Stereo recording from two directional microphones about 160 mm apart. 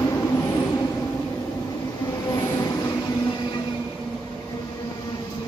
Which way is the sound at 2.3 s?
20° left (ahead or behind).